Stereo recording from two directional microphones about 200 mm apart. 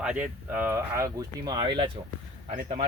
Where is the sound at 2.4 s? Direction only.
35° right (ahead or behind).